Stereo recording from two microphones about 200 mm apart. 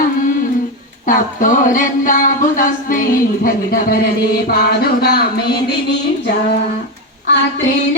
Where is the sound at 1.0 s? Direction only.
40° left (ahead or behind).